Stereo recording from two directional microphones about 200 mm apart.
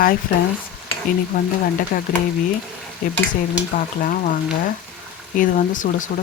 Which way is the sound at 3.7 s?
40° left (ahead or behind).